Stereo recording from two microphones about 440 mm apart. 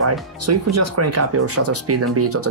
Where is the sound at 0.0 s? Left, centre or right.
Right.